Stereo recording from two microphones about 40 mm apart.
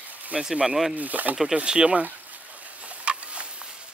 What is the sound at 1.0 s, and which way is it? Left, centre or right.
Speech, right.